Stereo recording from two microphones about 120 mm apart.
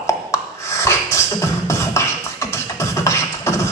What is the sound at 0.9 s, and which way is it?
Beatboxing, 25° left (ahead or behind).